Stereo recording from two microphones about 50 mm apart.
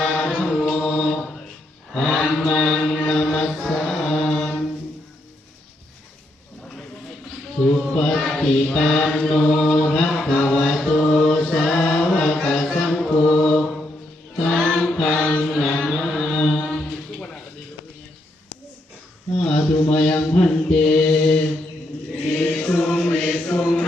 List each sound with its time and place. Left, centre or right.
0.0 s chant: centre
3.0 s music: centre
3.7 s mantra: centre
7.6 s speech: centre
8.4 s chant: left
13.0 s choir: centre
15.4 s chant: centre
19.4 s a sound: centre
19.8 s chant: centre
20.1 s mantra: left
22.3 s choir: centre
23.0 s chant: centre